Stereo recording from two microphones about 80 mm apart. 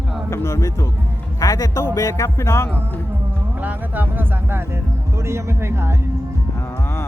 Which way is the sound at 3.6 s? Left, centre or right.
Right.